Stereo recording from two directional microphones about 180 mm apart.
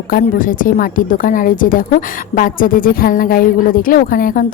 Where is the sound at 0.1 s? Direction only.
50° left (ahead or behind).